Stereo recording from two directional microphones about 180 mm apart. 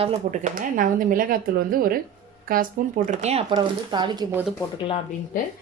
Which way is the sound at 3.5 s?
25° right (ahead or behind).